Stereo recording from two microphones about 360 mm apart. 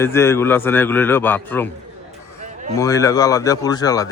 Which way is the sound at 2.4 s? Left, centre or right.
Centre.